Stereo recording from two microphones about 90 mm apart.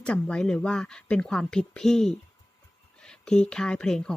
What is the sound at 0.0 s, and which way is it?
Speech, 10° left (ahead or behind).